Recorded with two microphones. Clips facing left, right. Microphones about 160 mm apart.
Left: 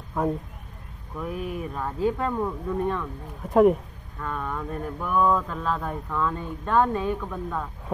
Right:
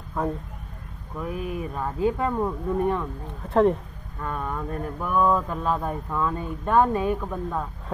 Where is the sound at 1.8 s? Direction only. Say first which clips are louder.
Right 1 dB; 10° right (ahead or behind).